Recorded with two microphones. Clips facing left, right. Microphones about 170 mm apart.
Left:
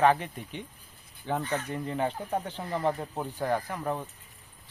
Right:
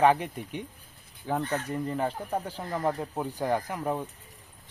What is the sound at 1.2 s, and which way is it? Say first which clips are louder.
Speech: right 1 dB; centre (ahead or behind).